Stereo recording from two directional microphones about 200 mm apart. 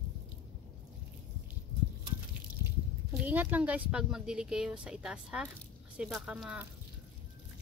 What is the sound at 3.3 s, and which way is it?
Speech, 10° right (ahead or behind).